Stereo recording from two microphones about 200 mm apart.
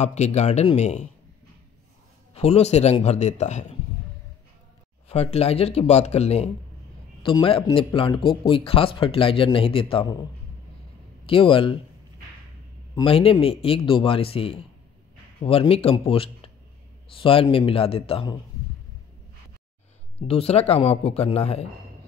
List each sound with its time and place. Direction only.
0.0 s speech: 35° left (ahead or behind)
2.3 s speech: 30° left (ahead or behind)
5.0 s speech: 30° left (ahead or behind)
11.2 s speech: 25° left (ahead or behind)
12.9 s speech: 25° left (ahead or behind)
20.2 s speech: 30° left (ahead or behind)